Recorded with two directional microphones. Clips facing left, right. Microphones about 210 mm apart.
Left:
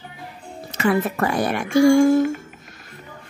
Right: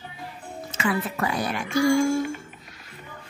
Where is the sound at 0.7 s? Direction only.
45° left (ahead or behind).